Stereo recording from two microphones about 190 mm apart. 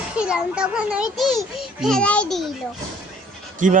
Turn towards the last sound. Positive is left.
turn(degrees=-45)  # may be behind; listen again after turning